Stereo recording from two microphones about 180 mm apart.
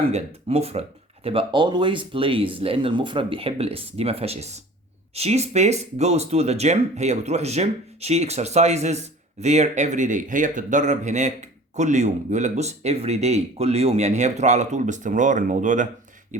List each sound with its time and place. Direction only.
0.1 s speech: 35° right (ahead or behind)